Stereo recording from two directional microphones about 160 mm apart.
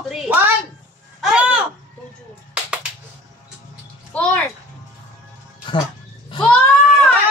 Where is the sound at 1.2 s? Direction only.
5° right (ahead or behind).